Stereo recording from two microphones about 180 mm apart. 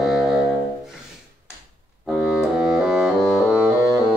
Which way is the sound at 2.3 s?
5° right (ahead or behind).